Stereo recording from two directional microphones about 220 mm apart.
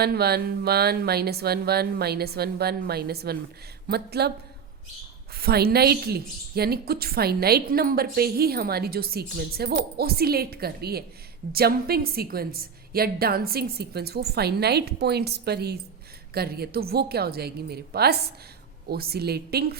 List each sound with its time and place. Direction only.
0.0 s a woman's voice: 45° right (ahead or behind)
5.4 s a woman's voice: 45° right (ahead or behind)